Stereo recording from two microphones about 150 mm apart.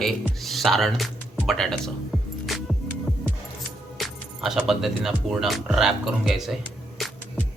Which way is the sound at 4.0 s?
Centre (ahead or behind).